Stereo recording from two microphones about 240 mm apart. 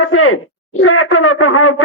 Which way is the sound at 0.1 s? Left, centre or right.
Left.